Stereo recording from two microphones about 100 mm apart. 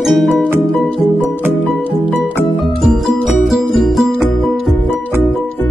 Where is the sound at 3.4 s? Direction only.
Centre (ahead or behind).